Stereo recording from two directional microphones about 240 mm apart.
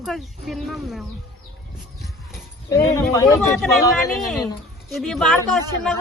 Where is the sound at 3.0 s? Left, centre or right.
Centre.